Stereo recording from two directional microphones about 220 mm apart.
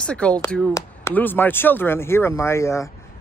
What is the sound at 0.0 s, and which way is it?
Speech, 5° left (ahead or behind).